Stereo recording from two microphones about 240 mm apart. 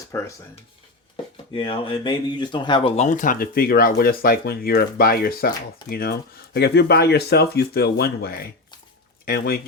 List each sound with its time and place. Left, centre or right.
0.1 s speech: centre; by 9.6 s left